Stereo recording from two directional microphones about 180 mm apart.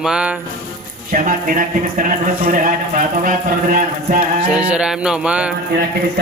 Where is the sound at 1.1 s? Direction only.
50° right (ahead or behind).